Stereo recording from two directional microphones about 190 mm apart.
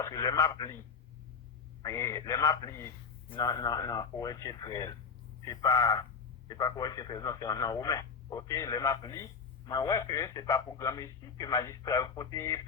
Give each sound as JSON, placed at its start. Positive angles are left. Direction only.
{"t": 0.0, "sound": "speech", "side_deg": 20}
{"t": 1.8, "sound": "speech", "side_deg": 15}